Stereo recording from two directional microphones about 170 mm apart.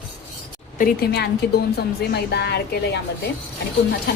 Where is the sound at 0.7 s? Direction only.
60° left (ahead or behind); by 2.6 s 75° left (ahead or behind).